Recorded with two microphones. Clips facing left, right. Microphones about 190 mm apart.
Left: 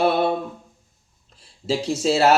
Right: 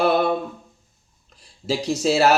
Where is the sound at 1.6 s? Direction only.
25° left (ahead or behind).